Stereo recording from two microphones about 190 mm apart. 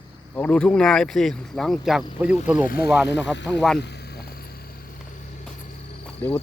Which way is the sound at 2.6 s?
50° left (ahead or behind).